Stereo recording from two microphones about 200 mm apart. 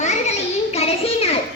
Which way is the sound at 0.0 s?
35° left (ahead or behind).